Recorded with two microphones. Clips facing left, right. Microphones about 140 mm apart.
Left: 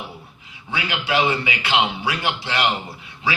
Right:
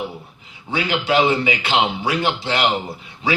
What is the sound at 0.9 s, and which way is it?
Speech, 40° right (ahead or behind).